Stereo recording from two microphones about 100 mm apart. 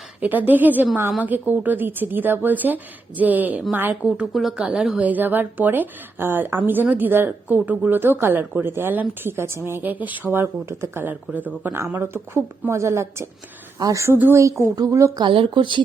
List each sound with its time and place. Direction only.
0.2 s speech: 15° right (ahead or behind)
4.4 s a woman's voice: centre (ahead or behind); by 15.2 s 30° right (ahead or behind)
15.2 s speech: 60° right (ahead or behind)